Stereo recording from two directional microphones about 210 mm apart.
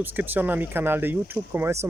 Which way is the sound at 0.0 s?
10° right (ahead or behind).